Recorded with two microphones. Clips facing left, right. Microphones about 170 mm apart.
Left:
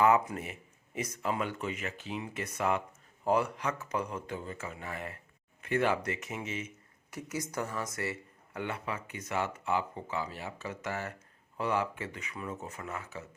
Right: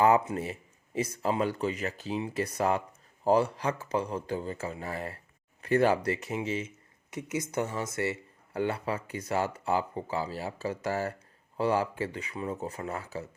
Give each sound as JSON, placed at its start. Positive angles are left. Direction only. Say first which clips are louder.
{"t": 0.0, "sound": "speech", "louder": "right 2 dB", "side_deg": -30}